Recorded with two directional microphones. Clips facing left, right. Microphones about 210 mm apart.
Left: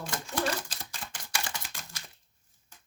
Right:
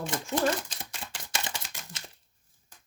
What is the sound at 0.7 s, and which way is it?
Typewriter, 20° right (ahead or behind).